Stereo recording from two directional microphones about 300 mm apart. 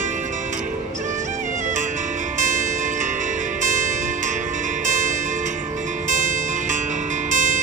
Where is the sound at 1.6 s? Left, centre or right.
Right.